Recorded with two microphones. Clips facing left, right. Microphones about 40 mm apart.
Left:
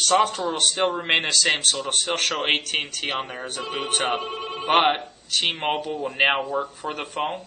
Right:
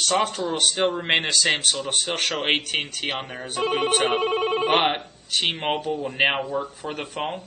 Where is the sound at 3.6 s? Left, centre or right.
Right.